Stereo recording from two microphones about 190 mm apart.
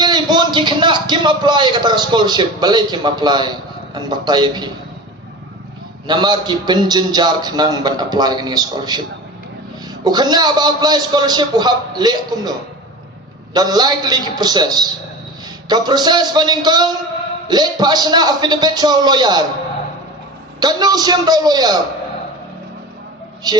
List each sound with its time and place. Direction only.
0.0 s a man's voice: 20° right (ahead or behind)
6.1 s a man's voice: 25° right (ahead or behind)
10.0 s a man's voice: 20° right (ahead or behind)
20.6 s a man's voice: 20° right (ahead or behind)